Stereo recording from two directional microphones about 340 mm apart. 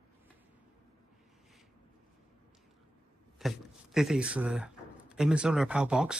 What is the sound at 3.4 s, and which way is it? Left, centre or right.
Speech, centre.